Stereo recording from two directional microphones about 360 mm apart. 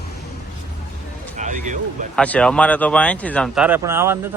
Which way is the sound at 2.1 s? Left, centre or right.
Centre.